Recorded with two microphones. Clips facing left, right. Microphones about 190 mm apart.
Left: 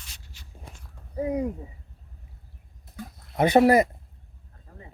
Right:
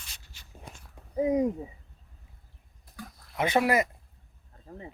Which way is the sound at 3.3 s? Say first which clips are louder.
Left 7 dB; 40° left (ahead or behind).